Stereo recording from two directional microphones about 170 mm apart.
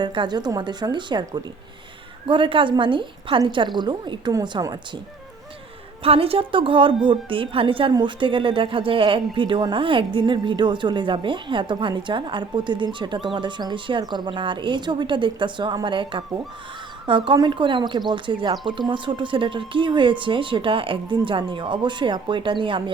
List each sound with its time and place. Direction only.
0.0 s a woman's voice: 25° right (ahead or behind)
6.0 s a woman's voice: 35° right (ahead or behind)